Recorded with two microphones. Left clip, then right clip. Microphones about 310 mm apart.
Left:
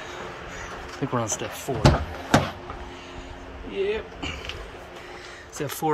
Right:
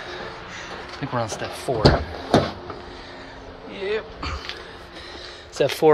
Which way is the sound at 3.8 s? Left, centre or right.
Centre.